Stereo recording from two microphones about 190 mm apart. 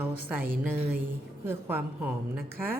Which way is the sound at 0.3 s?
10° right (ahead or behind).